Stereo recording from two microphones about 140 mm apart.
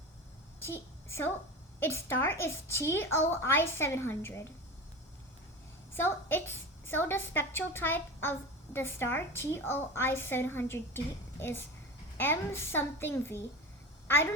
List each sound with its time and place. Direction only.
0.6 s a woman's voice: 20° left (ahead or behind)
5.9 s a woman's voice: 15° left (ahead or behind)